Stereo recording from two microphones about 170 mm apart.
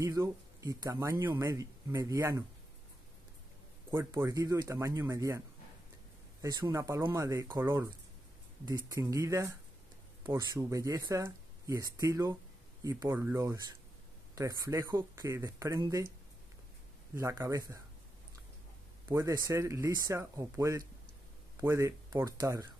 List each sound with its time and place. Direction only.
0.0 s speech: 20° right (ahead or behind)
3.9 s speech: 15° right (ahead or behind)
6.4 s speech: 20° right (ahead or behind)
17.1 s speech: 15° right (ahead or behind)
19.0 s speech: 20° right (ahead or behind)